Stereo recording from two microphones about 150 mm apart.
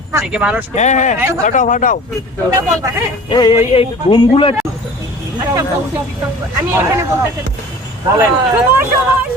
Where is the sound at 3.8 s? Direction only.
30° left (ahead or behind).